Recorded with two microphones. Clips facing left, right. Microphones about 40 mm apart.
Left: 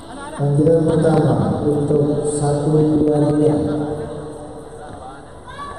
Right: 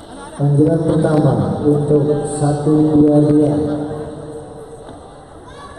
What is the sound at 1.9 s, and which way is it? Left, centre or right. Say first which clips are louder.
Speech: right 2 dB; centre.